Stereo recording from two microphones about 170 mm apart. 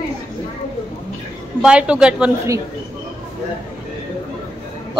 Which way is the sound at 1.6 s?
5° right (ahead or behind).